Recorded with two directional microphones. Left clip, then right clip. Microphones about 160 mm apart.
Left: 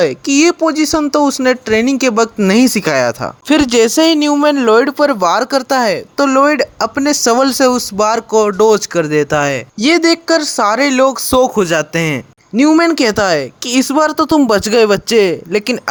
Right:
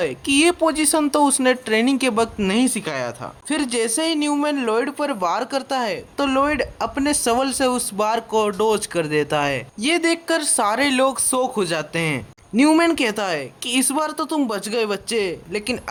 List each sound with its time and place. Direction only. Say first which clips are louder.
0.0 s speech: left 7 dB; 30° left (ahead or behind)
2.5 s speech: left 10 dB; 45° left (ahead or behind)
7.9 s speech: left 8 dB; 30° left (ahead or behind)
9.8 s speech: left 9 dB; 40° left (ahead or behind)
11.3 s speech: left 10 dB; 45° left (ahead or behind)
12.5 s speech: left 6 dB; 25° left (ahead or behind)
12.9 s speech: left 9 dB; 35° left (ahead or behind)